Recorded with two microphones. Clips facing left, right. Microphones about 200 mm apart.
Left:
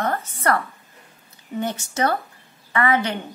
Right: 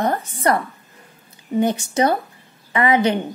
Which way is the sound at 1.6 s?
15° right (ahead or behind).